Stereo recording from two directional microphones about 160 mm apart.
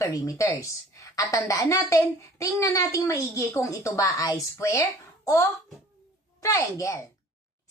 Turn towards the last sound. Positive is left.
turn(degrees=20)  # may be behind; listen again after turning